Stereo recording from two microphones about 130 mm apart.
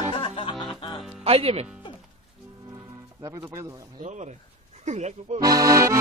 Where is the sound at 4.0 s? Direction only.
65° right (ahead or behind).